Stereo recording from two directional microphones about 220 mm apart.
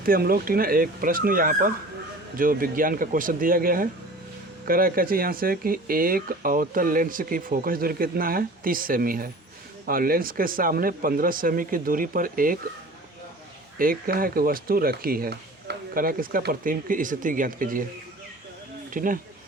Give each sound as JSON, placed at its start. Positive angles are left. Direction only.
{"t": 0.0, "sound": "speech", "side_deg": -40}
{"t": 13.7, "sound": "speech", "side_deg": -40}
{"t": 18.9, "sound": "speech", "side_deg": -40}